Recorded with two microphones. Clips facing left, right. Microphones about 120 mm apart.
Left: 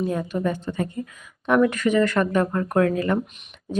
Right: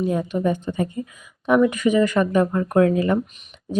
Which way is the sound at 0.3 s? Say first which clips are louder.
Right 3 dB; 15° right (ahead or behind).